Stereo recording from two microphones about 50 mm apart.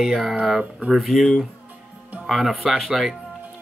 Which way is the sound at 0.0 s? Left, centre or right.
Centre.